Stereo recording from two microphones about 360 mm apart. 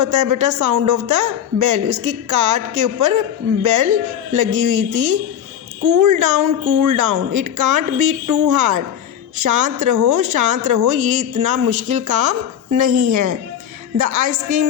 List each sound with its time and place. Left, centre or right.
0.0 s a woman's voice: right
5.8 s a woman's voice: right